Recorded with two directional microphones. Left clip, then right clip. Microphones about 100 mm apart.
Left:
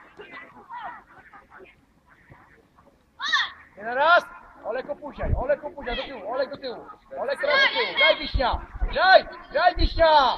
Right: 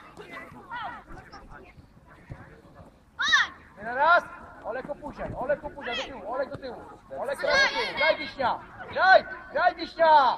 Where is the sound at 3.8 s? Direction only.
50° left (ahead or behind).